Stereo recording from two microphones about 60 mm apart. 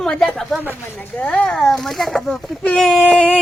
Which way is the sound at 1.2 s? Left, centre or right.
Left.